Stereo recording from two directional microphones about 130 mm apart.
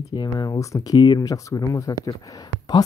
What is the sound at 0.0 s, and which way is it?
Speech, 30° left (ahead or behind).